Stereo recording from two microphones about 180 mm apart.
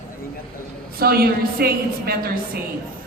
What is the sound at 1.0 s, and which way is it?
A woman's voice, 60° right (ahead or behind).